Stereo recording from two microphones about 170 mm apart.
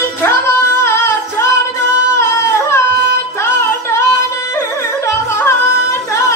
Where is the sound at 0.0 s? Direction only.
15° left (ahead or behind).